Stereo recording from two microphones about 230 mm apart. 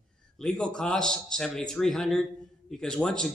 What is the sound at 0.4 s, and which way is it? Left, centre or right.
A man's voice, centre.